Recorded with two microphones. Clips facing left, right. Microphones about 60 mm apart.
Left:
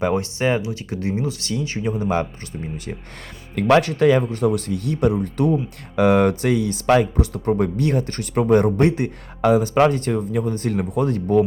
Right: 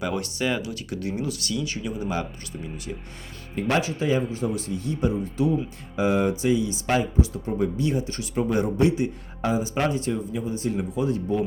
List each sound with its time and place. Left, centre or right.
0.0 s speech: left
3.5 s speech: left